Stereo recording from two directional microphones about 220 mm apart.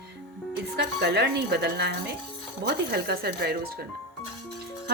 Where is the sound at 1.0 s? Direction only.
50° right (ahead or behind).